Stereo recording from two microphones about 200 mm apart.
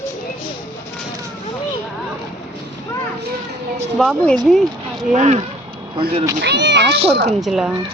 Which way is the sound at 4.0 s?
Centre (ahead or behind).